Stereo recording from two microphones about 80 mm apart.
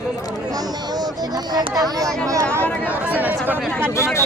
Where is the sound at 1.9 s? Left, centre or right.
Right.